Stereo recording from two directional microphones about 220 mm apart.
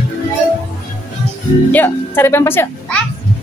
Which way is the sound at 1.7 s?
10° left (ahead or behind).